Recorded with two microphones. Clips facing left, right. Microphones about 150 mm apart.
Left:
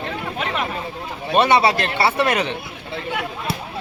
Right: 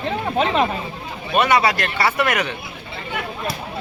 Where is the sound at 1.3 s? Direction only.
30° left (ahead or behind).